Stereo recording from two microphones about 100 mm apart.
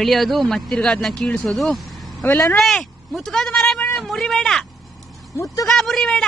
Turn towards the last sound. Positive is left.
turn(degrees=5)  # may be behind; listen again after turning